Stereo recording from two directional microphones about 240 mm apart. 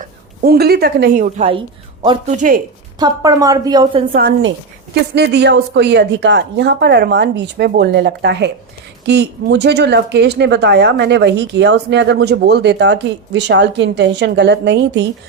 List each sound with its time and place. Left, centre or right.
0.0 s a woman's voice: right
3.0 s a woman's voice: centre
4.1 s speech: right